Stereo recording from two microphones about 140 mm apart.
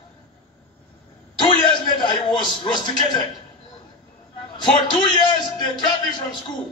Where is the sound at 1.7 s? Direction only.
35° left (ahead or behind).